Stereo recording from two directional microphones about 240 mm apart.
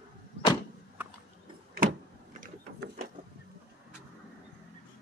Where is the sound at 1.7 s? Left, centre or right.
Right.